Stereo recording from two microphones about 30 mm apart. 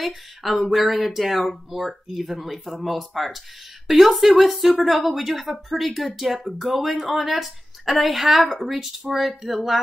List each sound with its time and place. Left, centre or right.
0.0 s a woman's voice: centre